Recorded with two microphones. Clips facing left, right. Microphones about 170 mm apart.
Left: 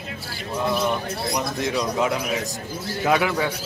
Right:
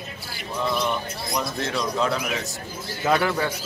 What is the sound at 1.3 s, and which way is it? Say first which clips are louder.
Speech: left 1 dB; 15° left (ahead or behind).